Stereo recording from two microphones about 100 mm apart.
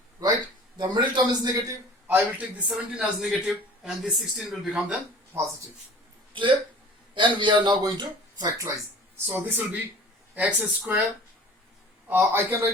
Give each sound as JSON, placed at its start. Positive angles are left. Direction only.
{"t": 0.8, "sound": "a man's voice", "side_deg": -45}
{"t": 2.0, "sound": "a man's voice", "side_deg": -15}
{"t": 6.3, "sound": "a man's voice", "side_deg": -55}
{"t": 9.2, "sound": "a man's voice", "side_deg": -20}
{"t": 12.0, "sound": "speech", "side_deg": -20}